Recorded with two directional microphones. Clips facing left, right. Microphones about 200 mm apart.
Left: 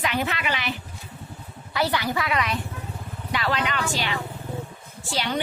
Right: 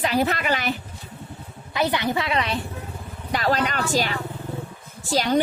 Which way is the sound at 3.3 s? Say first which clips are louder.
Right 3 dB; 40° right (ahead or behind).